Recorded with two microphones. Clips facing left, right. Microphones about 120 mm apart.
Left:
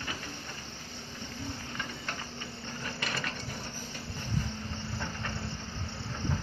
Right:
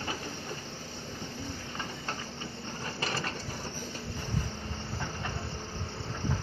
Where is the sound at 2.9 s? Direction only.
30° right (ahead or behind).